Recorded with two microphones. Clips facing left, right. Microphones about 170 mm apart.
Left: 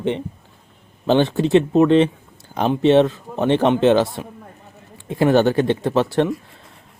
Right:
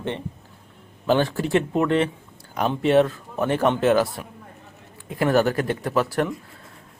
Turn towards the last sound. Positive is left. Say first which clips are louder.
# left 5 dB
turn(degrees=25)  # may be behind; listen again after turning